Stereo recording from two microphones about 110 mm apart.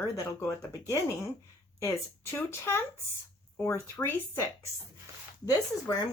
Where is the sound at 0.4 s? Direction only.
35° left (ahead or behind).